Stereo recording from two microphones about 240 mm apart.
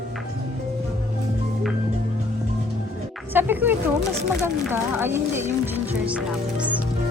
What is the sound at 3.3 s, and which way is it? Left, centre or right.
Speech, centre.